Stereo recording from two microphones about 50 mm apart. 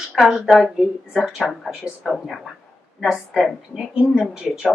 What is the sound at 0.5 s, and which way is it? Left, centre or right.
Speech, centre.